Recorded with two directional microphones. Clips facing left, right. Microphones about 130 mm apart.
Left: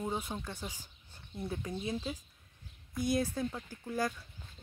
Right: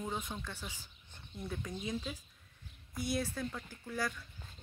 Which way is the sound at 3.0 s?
45° left (ahead or behind).